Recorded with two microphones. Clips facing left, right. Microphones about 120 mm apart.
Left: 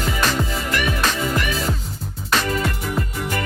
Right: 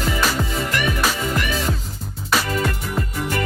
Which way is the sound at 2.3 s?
5° right (ahead or behind).